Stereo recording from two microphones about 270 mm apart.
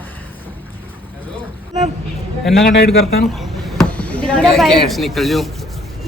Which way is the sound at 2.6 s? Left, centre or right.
Left.